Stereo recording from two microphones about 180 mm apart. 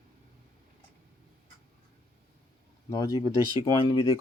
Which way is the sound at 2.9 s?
20° left (ahead or behind).